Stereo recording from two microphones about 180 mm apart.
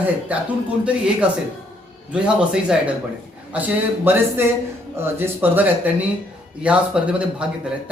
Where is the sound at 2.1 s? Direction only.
5° right (ahead or behind).